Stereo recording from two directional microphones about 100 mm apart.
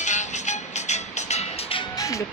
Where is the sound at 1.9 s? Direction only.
35° left (ahead or behind).